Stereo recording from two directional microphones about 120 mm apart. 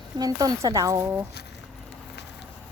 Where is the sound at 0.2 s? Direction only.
30° right (ahead or behind).